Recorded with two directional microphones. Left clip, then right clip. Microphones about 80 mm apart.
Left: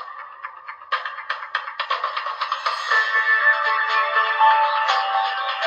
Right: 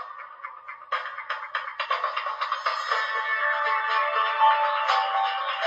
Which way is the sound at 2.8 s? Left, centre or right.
Left.